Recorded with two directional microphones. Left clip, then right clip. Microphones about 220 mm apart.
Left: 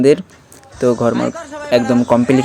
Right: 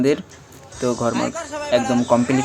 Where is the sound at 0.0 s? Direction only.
25° left (ahead or behind).